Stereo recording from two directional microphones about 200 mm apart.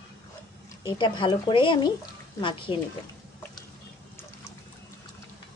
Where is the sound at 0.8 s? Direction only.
20° left (ahead or behind).